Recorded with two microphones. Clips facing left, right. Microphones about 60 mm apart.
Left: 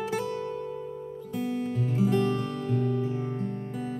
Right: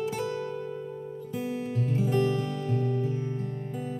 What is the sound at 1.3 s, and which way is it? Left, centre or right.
Music, centre.